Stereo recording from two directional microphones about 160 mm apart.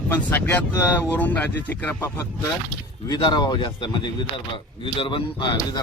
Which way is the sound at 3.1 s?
25° left (ahead or behind).